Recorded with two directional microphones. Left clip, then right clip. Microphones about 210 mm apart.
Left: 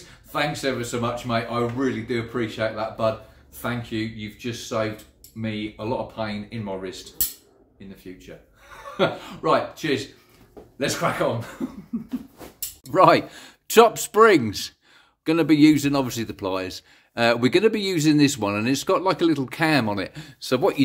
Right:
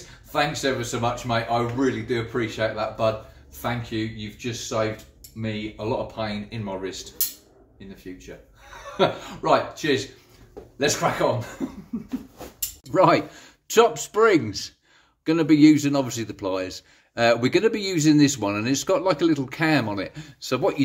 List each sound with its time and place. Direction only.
0.3 s speech: 5° left (ahead or behind)
8.9 s speech: 10° left (ahead or behind)
11.9 s a sound: centre (ahead or behind)
12.9 s a man's voice: 25° left (ahead or behind)